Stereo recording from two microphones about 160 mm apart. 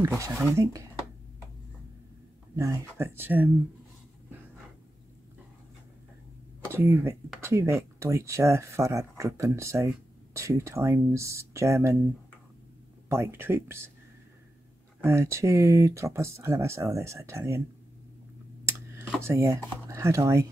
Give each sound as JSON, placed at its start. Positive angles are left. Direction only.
{"t": 0.0, "sound": "speech", "side_deg": -20}
{"t": 2.5, "sound": "speech", "side_deg": -20}
{"t": 6.7, "sound": "speech", "side_deg": -15}
{"t": 13.1, "sound": "speech", "side_deg": -15}
{"t": 15.0, "sound": "speech", "side_deg": -15}
{"t": 19.2, "sound": "speech", "side_deg": -15}